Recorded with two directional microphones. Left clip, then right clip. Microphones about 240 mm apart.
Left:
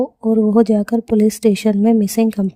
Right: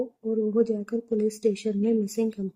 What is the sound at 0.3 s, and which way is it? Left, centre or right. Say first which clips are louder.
Speech: left 10 dB; left.